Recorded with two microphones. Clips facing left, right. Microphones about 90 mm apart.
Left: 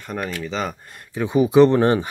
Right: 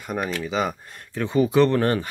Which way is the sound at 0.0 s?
10° right (ahead or behind).